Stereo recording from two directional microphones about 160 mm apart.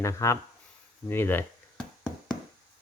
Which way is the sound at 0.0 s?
20° left (ahead or behind).